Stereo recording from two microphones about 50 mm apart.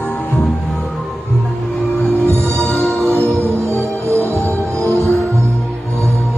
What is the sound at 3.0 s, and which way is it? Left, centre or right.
Music, right.